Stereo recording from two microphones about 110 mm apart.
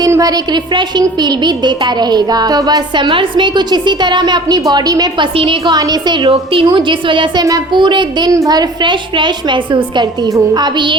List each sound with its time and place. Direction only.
0.0 s a woman's voice: 35° right (ahead or behind)